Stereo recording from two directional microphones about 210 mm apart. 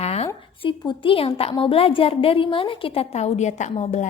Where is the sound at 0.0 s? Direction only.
30° left (ahead or behind).